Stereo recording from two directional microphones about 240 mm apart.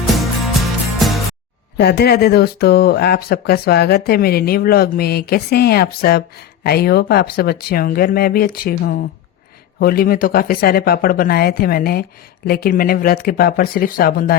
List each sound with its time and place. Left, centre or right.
0.9 s music: centre
1.8 s speech: left